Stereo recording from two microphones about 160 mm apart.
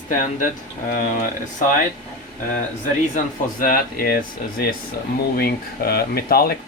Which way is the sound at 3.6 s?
65° left (ahead or behind).